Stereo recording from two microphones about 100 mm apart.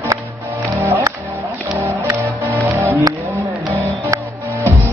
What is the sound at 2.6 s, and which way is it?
Music, 30° right (ahead or behind).